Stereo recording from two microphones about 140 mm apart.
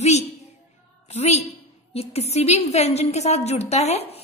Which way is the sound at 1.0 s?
50° left (ahead or behind).